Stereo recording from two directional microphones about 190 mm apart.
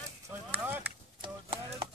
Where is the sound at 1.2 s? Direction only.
30° right (ahead or behind).